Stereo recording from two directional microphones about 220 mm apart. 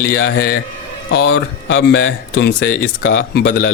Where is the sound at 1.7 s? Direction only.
55° left (ahead or behind).